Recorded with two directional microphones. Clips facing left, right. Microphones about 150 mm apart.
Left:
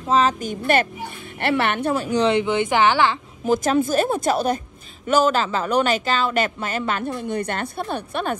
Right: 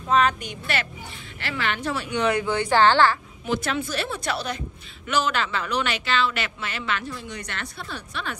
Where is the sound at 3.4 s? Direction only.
45° left (ahead or behind).